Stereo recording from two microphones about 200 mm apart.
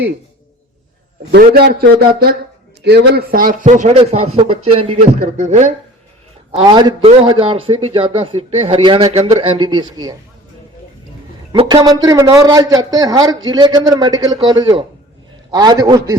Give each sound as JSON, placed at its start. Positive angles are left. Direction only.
{"t": 1.3, "sound": "a man's voice", "side_deg": -55}
{"t": 6.6, "sound": "a man's voice", "side_deg": -20}
{"t": 11.5, "sound": "a man's voice", "side_deg": -20}